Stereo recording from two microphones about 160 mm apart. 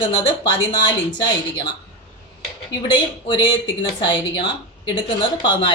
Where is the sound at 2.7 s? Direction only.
25° left (ahead or behind).